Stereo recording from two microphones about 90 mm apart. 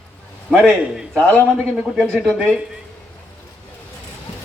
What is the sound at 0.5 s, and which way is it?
A man's voice, 10° right (ahead or behind).